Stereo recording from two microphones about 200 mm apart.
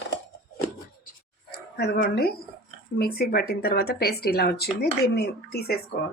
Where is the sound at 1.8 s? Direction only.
55° left (ahead or behind).